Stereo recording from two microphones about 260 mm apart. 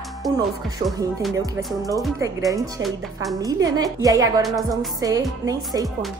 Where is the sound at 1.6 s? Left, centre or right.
Centre.